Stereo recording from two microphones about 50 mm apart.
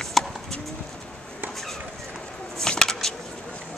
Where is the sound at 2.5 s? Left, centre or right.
Centre.